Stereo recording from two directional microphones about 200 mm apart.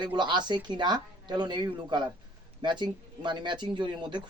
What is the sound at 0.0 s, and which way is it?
Speech, 20° right (ahead or behind).